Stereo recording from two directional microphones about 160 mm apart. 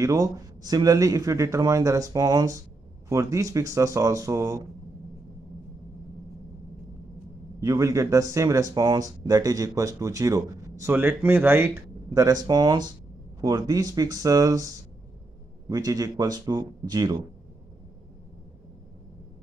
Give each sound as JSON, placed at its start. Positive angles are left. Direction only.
{"t": 0.0, "sound": "speech", "side_deg": -20}
{"t": 7.6, "sound": "speech", "side_deg": -20}